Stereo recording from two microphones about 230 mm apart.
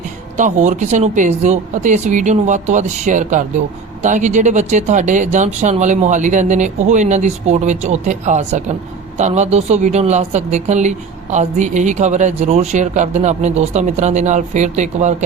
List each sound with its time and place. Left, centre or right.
0.3 s speech: right